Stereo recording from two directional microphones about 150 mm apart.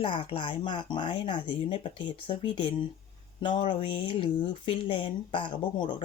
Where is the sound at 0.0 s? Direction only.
35° left (ahead or behind).